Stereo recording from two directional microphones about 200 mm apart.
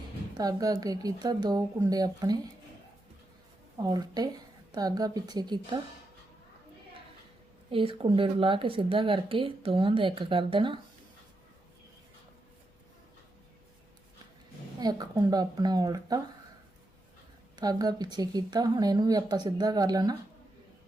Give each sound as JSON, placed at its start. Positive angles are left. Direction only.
{"t": 0.3, "sound": "speech", "side_deg": -20}
{"t": 3.8, "sound": "speech", "side_deg": -20}
{"t": 7.7, "sound": "speech", "side_deg": -25}
{"t": 14.8, "sound": "speech", "side_deg": -20}
{"t": 17.6, "sound": "speech", "side_deg": -20}